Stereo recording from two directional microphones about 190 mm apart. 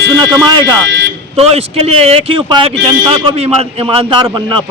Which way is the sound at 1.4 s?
30° right (ahead or behind).